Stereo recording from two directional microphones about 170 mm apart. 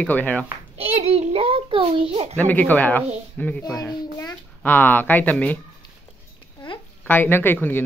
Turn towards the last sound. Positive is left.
turn(degrees=10)  # may be behind; listen again after turning